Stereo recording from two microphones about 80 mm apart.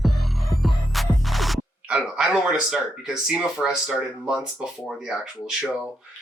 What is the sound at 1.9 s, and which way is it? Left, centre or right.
Speech, centre.